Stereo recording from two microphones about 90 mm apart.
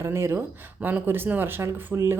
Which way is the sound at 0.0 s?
30° right (ahead or behind).